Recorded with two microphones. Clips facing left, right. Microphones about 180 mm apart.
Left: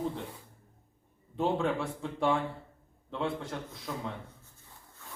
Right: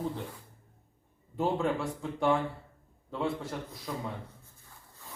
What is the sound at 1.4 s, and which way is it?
A man's voice, centre (ahead or behind).